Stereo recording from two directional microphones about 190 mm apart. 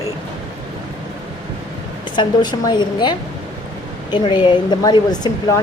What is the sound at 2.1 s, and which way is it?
A woman's voice, 20° left (ahead or behind).